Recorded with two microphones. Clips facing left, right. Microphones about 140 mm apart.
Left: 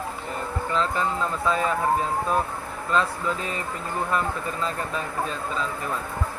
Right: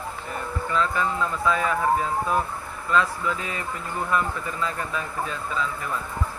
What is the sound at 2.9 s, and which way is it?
Speech, 35° left (ahead or behind).